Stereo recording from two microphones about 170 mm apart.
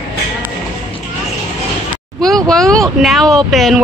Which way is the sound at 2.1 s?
Centre (ahead or behind).